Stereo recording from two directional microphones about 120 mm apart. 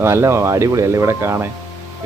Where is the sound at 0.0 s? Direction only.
25° right (ahead or behind).